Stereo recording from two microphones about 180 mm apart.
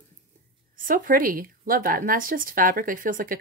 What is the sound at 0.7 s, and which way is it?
Speech, 50° right (ahead or behind).